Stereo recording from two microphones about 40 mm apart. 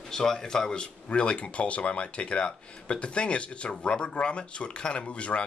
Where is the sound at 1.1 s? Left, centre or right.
Left.